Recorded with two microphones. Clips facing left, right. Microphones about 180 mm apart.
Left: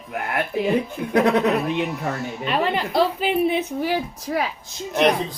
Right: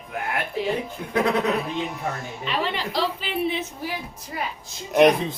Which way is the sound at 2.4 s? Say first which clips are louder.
Left 4 dB; 50° left (ahead or behind).